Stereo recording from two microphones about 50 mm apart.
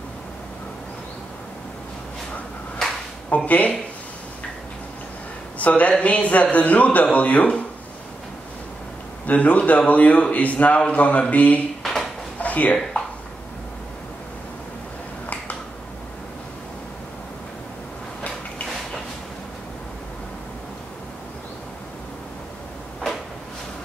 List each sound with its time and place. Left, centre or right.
3.3 s speech: left
5.6 s a man's voice: left
9.2 s a man's voice: left
11.8 s drawer open or close: centre
12.4 s a sound: left